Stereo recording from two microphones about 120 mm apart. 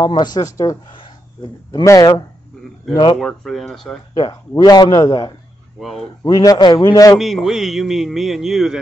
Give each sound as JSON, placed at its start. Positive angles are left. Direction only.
{"t": 0.1, "sound": "a man's voice", "side_deg": 35}
{"t": 1.9, "sound": "a man's voice", "side_deg": 35}
{"t": 3.2, "sound": "a man's voice", "side_deg": 5}
{"t": 4.1, "sound": "a man's voice", "side_deg": 35}
{"t": 7.2, "sound": "a man's voice", "side_deg": 0}